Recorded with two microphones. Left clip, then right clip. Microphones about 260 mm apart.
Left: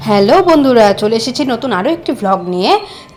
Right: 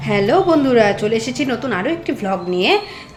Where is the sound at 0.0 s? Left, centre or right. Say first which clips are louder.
Left 6 dB; left.